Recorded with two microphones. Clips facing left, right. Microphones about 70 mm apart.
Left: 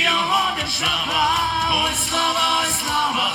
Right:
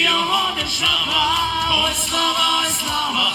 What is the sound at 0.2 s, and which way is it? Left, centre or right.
Music, left.